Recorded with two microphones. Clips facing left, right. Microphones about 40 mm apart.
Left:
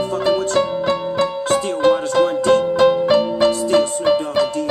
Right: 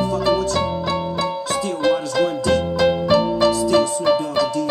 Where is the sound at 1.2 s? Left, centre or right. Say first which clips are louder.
Left 4 dB; left.